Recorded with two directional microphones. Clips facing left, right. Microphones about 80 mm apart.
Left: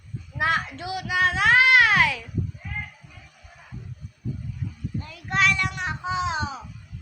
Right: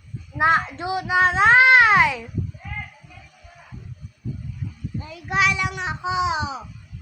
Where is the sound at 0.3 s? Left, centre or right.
Right.